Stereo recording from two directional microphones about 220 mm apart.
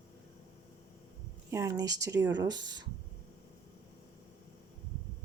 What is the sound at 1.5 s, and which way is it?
Speech, 15° right (ahead or behind).